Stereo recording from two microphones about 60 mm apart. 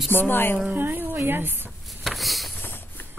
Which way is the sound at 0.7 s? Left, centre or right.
Right.